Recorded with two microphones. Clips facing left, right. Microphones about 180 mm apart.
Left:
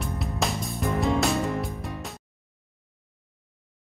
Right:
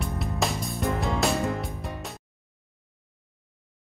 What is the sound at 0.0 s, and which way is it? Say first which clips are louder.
Music: even; centre (ahead or behind).